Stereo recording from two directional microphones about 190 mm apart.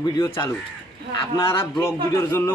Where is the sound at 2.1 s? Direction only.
10° left (ahead or behind).